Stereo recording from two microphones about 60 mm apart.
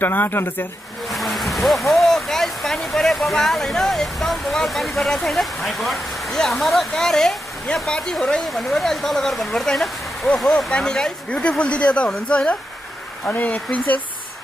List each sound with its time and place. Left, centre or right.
0.0 s speech: left
1.1 s speech: centre; by 14.0 s left